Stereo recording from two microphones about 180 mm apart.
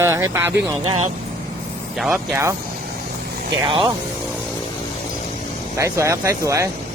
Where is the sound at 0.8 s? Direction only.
35° right (ahead or behind).